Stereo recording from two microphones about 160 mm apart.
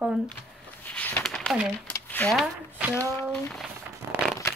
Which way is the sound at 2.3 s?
5° right (ahead or behind).